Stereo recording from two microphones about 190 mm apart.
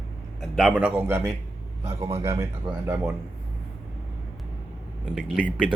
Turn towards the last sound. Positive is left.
turn(degrees=0)  # may be behind; listen again after turning